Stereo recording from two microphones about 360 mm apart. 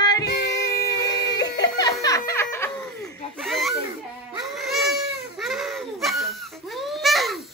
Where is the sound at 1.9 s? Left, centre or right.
Centre.